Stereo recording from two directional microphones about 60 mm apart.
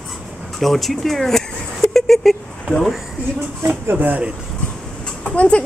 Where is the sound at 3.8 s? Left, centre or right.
Right.